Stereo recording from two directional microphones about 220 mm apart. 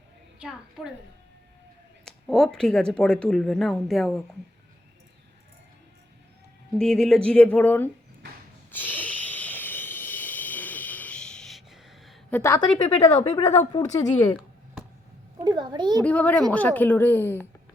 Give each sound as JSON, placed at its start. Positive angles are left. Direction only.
{"t": 0.3, "sound": "a woman's voice", "side_deg": -5}
{"t": 2.0, "sound": "speech", "side_deg": 0}
{"t": 6.7, "sound": "speech", "side_deg": 0}
{"t": 8.7, "sound": "a sound", "side_deg": 10}
{"t": 12.4, "sound": "a woman's voice", "side_deg": 15}
{"t": 12.8, "sound": "a woman's voice", "side_deg": 25}
{"t": 15.4, "sound": "a child's voice", "side_deg": -20}
{"t": 16.0, "sound": "a woman's voice", "side_deg": 5}